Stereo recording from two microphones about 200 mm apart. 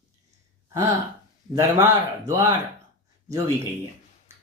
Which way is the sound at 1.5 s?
15° right (ahead or behind).